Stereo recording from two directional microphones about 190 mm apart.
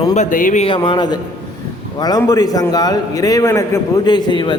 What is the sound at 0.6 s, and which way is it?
A man's voice, 25° left (ahead or behind).